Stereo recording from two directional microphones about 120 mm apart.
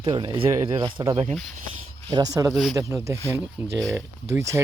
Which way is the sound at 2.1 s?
30° right (ahead or behind).